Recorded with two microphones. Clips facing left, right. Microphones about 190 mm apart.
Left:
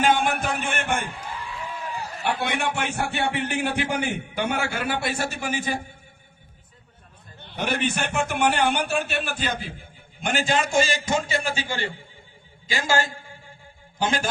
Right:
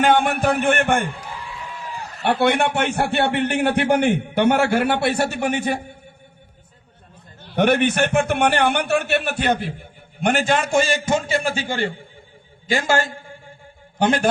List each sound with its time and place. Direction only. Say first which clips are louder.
0.0 s a man's voice: right 5 dB; 60° right (ahead or behind)
2.3 s a man's voice: right 9 dB; 65° right (ahead or behind)
7.5 s a man's voice: right 9 dB; 65° right (ahead or behind)